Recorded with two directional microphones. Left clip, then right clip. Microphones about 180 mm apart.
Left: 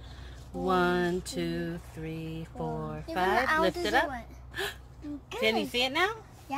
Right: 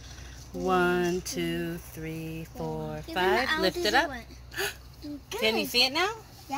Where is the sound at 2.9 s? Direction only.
15° right (ahead or behind).